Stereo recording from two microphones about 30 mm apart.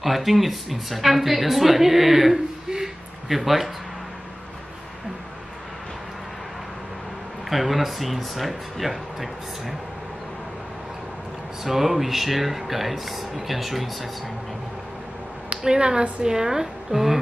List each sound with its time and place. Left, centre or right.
0.0 s a woman's voice: centre
2.7 s a sound: centre
7.4 s a woman's voice: centre
11.6 s a woman's voice: centre
15.6 s speech: right